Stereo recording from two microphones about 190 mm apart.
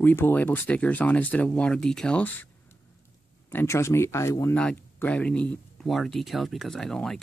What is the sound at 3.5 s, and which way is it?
Speech, 15° left (ahead or behind).